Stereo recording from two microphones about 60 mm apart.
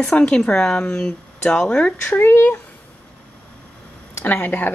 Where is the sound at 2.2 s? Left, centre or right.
Left.